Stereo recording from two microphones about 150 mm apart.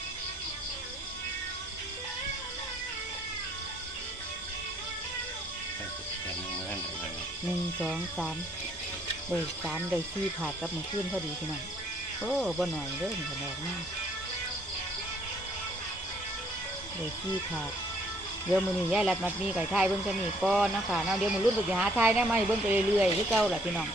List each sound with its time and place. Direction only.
7.8 s speech: centre (ahead or behind)
12.4 s speech: centre (ahead or behind)
18.5 s speech: 5° right (ahead or behind)